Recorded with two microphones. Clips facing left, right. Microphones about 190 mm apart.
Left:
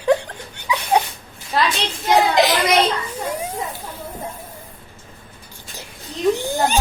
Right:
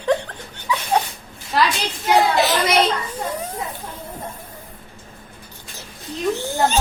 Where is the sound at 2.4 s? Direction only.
15° left (ahead or behind).